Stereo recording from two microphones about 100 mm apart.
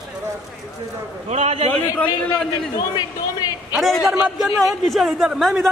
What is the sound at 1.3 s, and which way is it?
Speech, 90° right.